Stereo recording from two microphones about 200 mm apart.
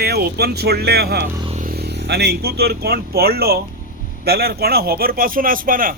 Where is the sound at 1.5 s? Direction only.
35° right (ahead or behind).